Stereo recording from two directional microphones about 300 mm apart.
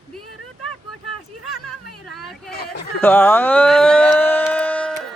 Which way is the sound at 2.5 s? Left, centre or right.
Left.